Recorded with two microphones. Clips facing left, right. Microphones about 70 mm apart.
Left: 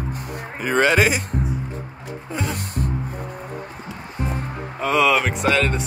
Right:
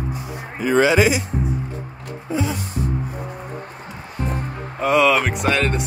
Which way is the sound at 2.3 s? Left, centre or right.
Left.